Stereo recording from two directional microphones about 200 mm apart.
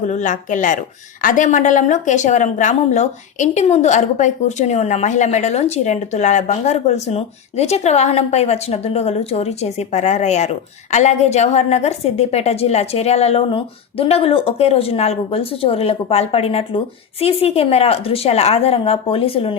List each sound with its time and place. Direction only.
0.1 s speech: 40° left (ahead or behind)